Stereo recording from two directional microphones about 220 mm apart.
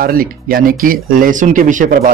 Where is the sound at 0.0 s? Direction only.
40° right (ahead or behind).